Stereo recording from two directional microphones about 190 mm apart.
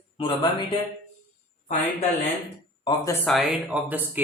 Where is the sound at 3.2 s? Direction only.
Centre (ahead or behind).